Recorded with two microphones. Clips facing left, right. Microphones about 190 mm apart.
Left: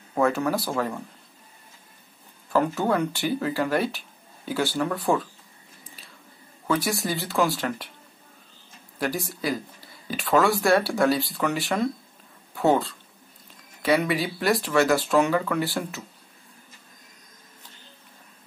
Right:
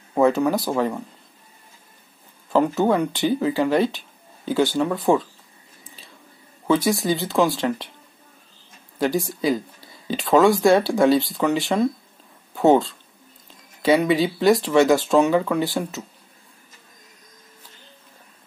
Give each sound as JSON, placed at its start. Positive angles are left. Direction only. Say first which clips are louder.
{"t": 0.1, "sound": "speech", "louder": "right 5 dB", "side_deg": -20}
{"t": 2.5, "sound": "speech", "louder": "right 4 dB", "side_deg": -20}
{"t": 6.7, "sound": "speech", "louder": "right 6 dB", "side_deg": -20}
{"t": 9.0, "sound": "speech", "louder": "right 6 dB", "side_deg": -20}
{"t": 14.0, "sound": "speech", "louder": "right 7 dB", "side_deg": -20}